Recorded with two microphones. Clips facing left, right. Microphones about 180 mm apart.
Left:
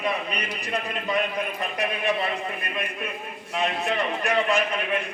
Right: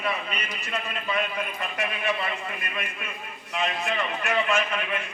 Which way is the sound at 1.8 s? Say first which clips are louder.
Left 3 dB; 35° left (ahead or behind).